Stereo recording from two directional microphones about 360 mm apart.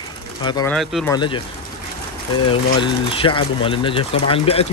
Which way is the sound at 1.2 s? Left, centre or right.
Centre.